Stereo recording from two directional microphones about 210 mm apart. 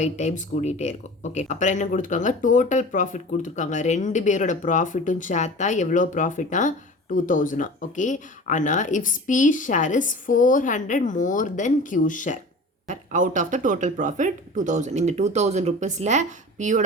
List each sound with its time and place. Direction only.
0.0 s speech: 35° left (ahead or behind)
12.9 s speech: 35° right (ahead or behind)